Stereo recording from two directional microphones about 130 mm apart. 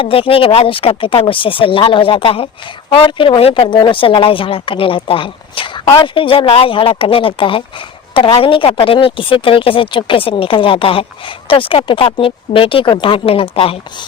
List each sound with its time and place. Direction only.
0.0 s speech: 45° left (ahead or behind)